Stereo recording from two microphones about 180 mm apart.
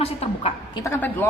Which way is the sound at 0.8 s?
15° left (ahead or behind).